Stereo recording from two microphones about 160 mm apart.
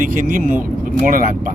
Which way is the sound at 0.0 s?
60° right (ahead or behind).